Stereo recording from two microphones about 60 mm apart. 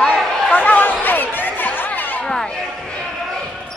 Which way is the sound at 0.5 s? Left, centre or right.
Left.